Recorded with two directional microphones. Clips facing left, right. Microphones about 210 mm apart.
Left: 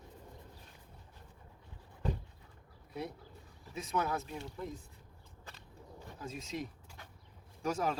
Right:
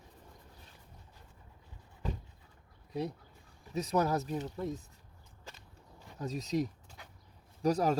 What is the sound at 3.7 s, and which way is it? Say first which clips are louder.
Speech: right 5 dB; 40° right (ahead or behind).